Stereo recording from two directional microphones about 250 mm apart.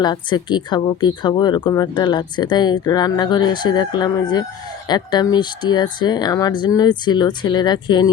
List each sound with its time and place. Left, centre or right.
0.0 s speech: centre